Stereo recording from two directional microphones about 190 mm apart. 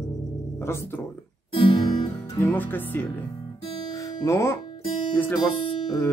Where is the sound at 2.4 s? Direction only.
10° left (ahead or behind).